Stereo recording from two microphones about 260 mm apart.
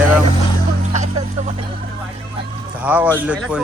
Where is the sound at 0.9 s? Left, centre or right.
Right.